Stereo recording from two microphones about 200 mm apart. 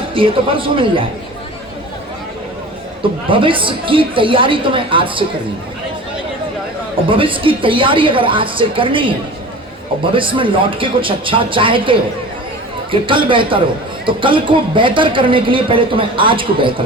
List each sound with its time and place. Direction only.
0.1 s speech: 25° right (ahead or behind)
3.2 s speech: 25° right (ahead or behind)
7.1 s speech: 25° right (ahead or behind)